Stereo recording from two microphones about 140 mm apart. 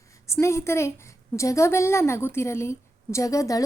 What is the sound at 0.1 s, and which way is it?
A woman's voice, 20° left (ahead or behind).